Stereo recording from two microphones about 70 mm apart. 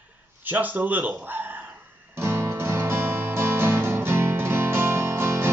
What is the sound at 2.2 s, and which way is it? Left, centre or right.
Music, right.